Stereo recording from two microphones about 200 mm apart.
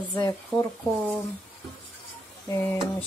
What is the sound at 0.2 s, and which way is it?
Speech, 15° left (ahead or behind).